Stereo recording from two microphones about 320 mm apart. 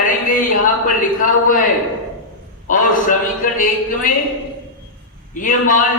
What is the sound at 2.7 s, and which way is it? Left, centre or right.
A man's voice, left.